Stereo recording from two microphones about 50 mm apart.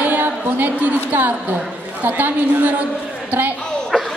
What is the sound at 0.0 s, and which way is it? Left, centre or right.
A woman's voice, right.